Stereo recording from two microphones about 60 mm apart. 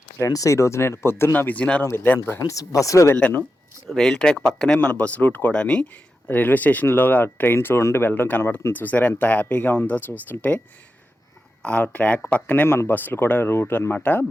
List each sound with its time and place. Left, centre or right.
0.3 s speech: left
2.5 s speech: left
3.8 s speech: centre
4.8 s speech: left
5.5 s speech: centre
6.2 s speech: left
7.5 s speech: left
11.6 s speech: left
12.6 s speech: left
12.9 s speech: left